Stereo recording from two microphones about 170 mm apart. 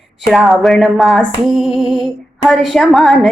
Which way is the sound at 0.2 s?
Centre (ahead or behind).